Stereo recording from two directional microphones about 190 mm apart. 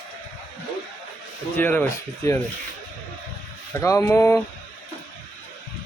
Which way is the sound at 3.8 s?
15° left (ahead or behind).